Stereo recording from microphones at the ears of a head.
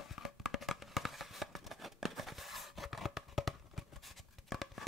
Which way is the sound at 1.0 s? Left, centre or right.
Centre.